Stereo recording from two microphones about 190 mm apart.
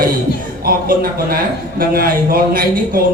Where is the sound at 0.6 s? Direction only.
50° right (ahead or behind).